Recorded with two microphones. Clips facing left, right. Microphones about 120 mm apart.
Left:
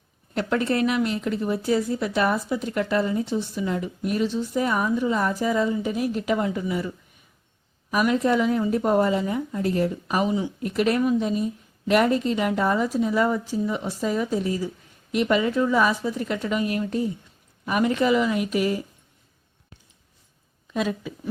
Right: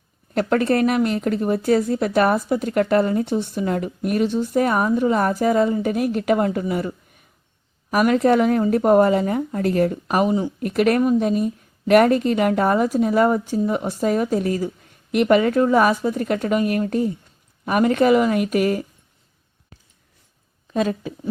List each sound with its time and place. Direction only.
0.3 s speech: 55° right (ahead or behind)
20.7 s speech: 45° right (ahead or behind)